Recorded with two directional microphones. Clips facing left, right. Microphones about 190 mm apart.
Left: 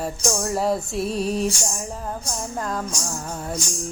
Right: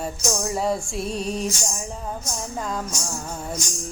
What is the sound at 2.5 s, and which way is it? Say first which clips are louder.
Female singing: left 1 dB; centre (ahead or behind).